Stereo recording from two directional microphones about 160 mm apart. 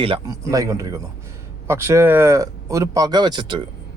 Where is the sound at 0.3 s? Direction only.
20° right (ahead or behind).